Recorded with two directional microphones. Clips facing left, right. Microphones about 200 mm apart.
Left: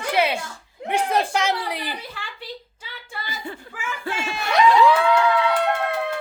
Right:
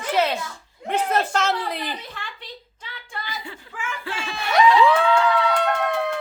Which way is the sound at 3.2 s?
50° left (ahead or behind).